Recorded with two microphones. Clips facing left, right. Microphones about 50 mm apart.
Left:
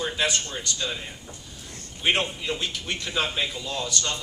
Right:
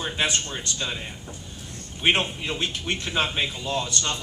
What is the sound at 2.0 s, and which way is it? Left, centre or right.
A woman's voice, right.